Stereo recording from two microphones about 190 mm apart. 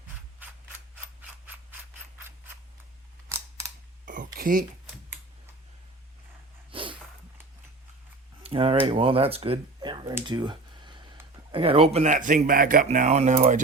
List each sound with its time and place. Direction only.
0.4 s scissors: 10° right (ahead or behind)
3.2 s camera: 15° right (ahead or behind)
4.0 s a sound: 45° right (ahead or behind)
6.7 s dog: 25° right (ahead or behind)
8.4 s speech: 30° right (ahead or behind)
10.2 s a sound: 25° right (ahead or behind)
11.5 s speech: 30° right (ahead or behind)